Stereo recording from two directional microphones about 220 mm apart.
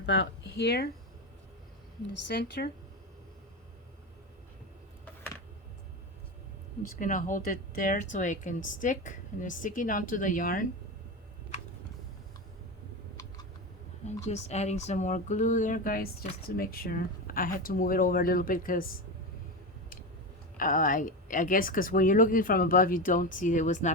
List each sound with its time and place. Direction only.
0.0 s speech: 50° left (ahead or behind)
2.2 s speech: 50° left (ahead or behind)
7.0 s speech: 35° left (ahead or behind)
14.1 s speech: 30° left (ahead or behind)
20.6 s speech: 40° left (ahead or behind)